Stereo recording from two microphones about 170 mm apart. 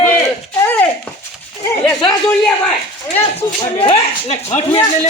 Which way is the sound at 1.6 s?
10° left (ahead or behind).